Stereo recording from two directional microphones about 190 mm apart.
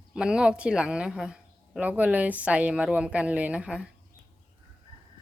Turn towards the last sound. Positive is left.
turn(degrees=-5)  # may be behind; listen again after turning